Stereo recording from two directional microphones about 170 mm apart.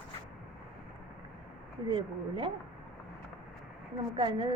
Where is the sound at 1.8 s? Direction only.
25° right (ahead or behind).